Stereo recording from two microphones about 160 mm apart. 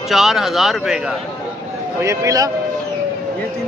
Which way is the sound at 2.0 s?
20° right (ahead or behind).